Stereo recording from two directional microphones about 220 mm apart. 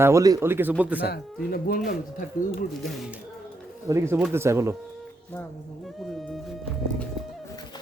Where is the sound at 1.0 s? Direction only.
45° left (ahead or behind).